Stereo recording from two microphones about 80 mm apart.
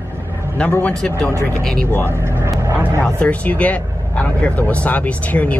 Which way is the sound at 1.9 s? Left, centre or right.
Left.